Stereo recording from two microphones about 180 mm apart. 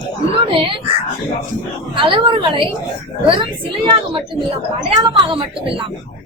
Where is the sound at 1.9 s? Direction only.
30° right (ahead or behind).